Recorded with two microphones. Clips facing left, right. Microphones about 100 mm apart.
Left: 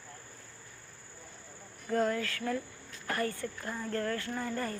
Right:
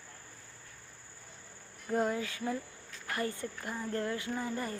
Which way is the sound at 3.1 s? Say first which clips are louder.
Left 1 dB; 20° right (ahead or behind).